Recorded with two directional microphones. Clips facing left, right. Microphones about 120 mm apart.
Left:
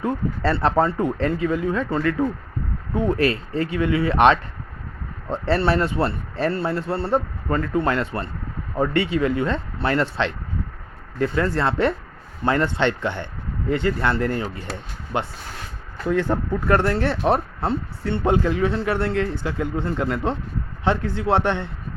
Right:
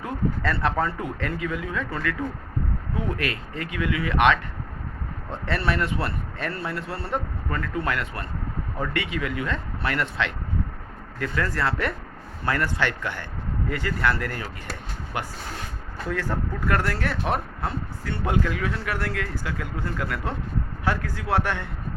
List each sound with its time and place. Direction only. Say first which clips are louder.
0.0 s speech: left 4 dB; 30° left (ahead or behind)